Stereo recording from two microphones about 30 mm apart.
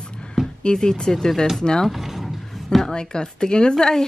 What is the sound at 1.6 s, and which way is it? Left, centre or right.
Speech, left.